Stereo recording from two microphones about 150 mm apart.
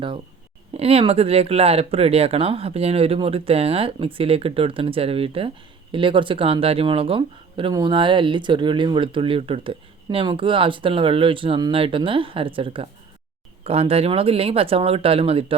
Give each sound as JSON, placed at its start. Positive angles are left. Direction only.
{"t": 0.7, "sound": "speech", "side_deg": -40}